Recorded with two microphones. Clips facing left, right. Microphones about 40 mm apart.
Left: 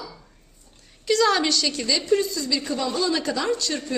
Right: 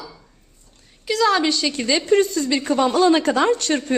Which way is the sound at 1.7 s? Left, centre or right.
Right.